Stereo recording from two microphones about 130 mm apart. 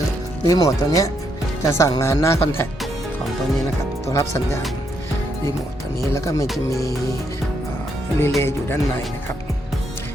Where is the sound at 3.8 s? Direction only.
20° left (ahead or behind).